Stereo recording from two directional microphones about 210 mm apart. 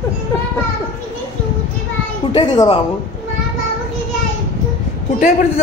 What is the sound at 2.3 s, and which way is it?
Speech, 20° left (ahead or behind).